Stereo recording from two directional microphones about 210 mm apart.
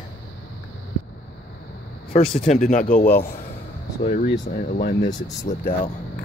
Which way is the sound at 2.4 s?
35° left (ahead or behind).